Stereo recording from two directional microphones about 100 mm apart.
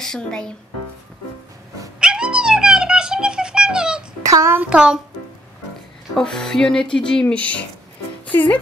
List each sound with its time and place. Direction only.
0.0 s speech: 5° left (ahead or behind)
2.0 s cat: 10° right (ahead or behind)
4.3 s child singing: 30° right (ahead or behind)
4.6 s a child's voice: 10° right (ahead or behind)
6.1 s speech: 5° left (ahead or behind)